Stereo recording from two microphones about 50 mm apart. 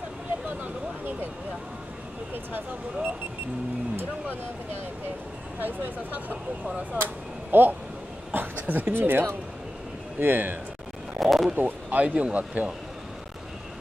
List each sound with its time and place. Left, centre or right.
2.3 s speech: right
5.6 s speech: right
7.5 s speech: right
11.1 s a sound: centre
11.5 s speech: right